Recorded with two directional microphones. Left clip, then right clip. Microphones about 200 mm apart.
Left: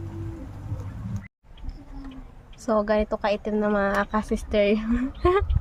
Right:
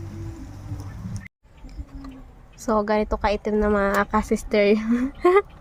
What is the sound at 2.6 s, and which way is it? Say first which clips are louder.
A woman's voice: right 1 dB; 20° right (ahead or behind).